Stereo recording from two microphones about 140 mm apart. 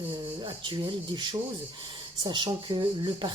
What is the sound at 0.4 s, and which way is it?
A woman's voice, 35° right (ahead or behind).